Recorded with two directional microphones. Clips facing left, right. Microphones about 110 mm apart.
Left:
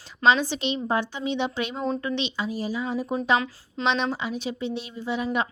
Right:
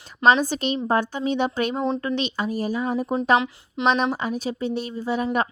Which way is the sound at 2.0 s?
45° right (ahead or behind).